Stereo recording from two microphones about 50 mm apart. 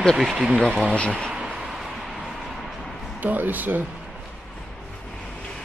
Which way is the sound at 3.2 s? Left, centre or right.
Right.